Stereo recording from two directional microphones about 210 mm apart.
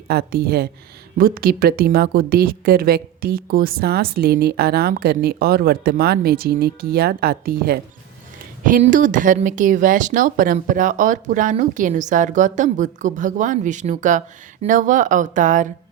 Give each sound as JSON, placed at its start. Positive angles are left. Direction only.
{"t": 0.1, "sound": "a woman's voice", "side_deg": -50}